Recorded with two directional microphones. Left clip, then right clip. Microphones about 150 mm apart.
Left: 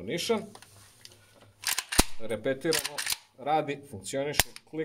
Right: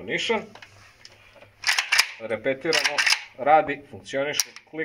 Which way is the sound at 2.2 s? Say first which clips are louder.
Right 4 dB; 55° left (ahead or behind).